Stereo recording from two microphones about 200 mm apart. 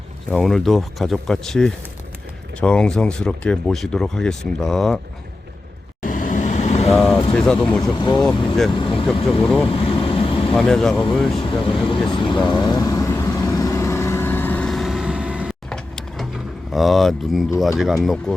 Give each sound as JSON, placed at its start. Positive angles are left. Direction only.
{"t": 0.3, "sound": "speech", "side_deg": 0}
{"t": 6.0, "sound": "vehicle", "side_deg": 40}
{"t": 6.9, "sound": "speech", "side_deg": 0}
{"t": 7.8, "sound": "speech", "side_deg": 20}
{"t": 9.6, "sound": "vehicle", "side_deg": 25}
{"t": 10.5, "sound": "speech", "side_deg": 0}
{"t": 11.3, "sound": "speech", "side_deg": 25}
{"t": 12.5, "sound": "vehicle", "side_deg": 20}
{"t": 16.7, "sound": "speech", "side_deg": 0}